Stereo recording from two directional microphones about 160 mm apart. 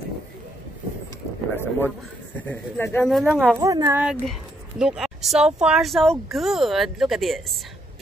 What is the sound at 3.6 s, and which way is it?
Speech, 20° right (ahead or behind).